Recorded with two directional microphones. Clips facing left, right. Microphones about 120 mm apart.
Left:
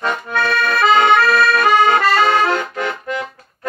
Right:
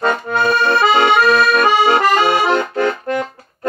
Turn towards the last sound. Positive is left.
turn(degrees=-40)  # may be behind; listen again after turning